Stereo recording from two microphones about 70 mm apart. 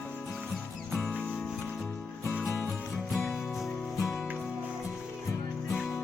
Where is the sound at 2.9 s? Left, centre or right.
Centre.